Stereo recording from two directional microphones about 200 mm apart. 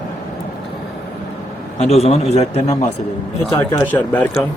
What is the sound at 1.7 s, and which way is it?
A man's voice, 30° left (ahead or behind).